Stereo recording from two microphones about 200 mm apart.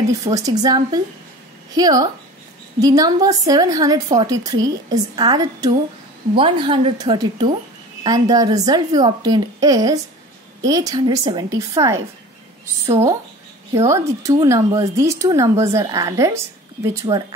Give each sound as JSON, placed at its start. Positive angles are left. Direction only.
{"t": 0.2, "sound": "a woman's voice", "side_deg": -15}
{"t": 13.7, "sound": "speech", "side_deg": -15}